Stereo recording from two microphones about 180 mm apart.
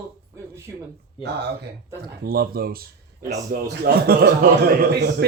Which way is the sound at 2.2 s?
55° right (ahead or behind).